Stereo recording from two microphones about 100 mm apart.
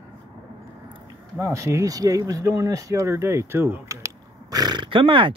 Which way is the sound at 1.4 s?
30° right (ahead or behind).